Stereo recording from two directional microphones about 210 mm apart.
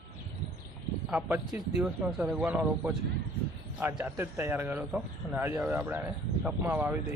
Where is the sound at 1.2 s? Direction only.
10° right (ahead or behind).